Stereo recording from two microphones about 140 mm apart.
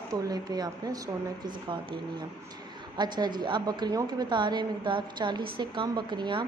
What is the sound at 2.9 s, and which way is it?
Speech, 30° right (ahead or behind).